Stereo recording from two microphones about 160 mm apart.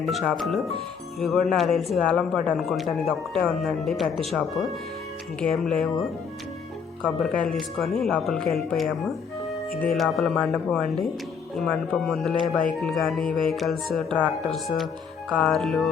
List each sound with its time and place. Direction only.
0.0 s speech: centre (ahead or behind)
5.4 s speech: 5° left (ahead or behind)